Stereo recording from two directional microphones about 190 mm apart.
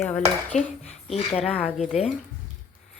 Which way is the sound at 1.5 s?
Centre (ahead or behind).